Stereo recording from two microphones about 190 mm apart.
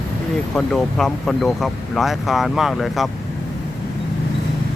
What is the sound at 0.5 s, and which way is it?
Speech, 5° left (ahead or behind).